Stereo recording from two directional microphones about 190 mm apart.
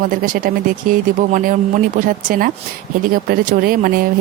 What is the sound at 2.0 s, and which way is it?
Speech, 45° right (ahead or behind).